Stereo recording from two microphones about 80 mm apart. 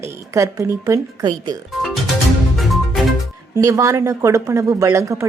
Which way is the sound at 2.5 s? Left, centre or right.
Centre.